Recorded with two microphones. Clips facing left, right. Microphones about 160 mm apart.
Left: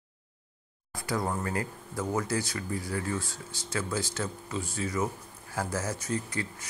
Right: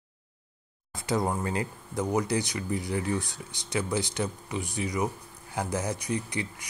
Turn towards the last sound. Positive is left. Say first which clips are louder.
# right 1 dB
turn(degrees=-15)  # may be behind; listen again after turning